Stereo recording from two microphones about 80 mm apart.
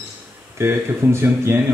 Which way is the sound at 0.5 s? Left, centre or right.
Right.